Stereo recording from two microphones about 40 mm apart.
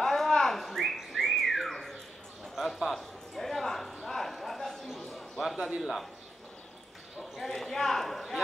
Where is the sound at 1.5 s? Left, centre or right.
Centre.